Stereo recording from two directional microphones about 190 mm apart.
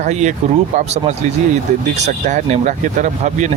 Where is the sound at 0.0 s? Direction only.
40° right (ahead or behind).